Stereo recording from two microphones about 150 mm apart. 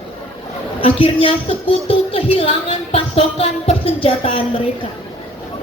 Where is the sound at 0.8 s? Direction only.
35° left (ahead or behind).